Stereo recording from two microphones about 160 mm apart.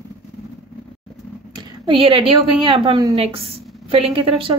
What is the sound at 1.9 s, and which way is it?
A woman's voice, 35° right (ahead or behind).